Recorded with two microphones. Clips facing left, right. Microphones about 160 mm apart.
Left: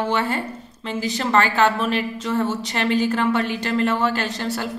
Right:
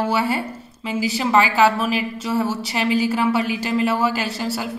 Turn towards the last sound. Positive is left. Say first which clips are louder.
# right 1 dB
turn(degrees=-5)  # may be behind; listen again after turning